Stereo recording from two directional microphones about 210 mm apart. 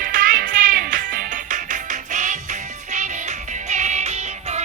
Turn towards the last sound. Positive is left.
turn(degrees=-35)  # may be behind; listen again after turning